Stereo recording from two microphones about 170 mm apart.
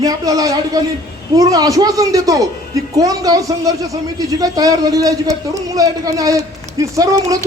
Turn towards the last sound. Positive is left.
turn(degrees=-20)  # may be behind; listen again after turning